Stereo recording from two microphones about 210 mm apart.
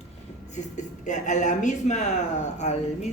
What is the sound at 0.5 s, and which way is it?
Speech, 35° left (ahead or behind).